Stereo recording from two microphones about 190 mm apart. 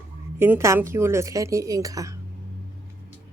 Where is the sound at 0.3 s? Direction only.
10° right (ahead or behind).